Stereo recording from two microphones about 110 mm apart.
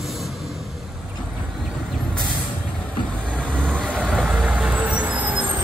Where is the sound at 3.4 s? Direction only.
5° left (ahead or behind).